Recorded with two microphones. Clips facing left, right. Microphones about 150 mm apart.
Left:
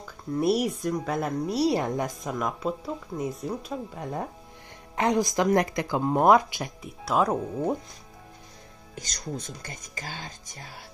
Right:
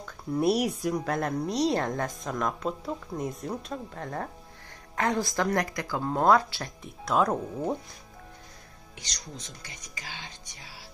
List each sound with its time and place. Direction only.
0.0 s a woman's voice: centre (ahead or behind)
8.9 s speech: 45° left (ahead or behind)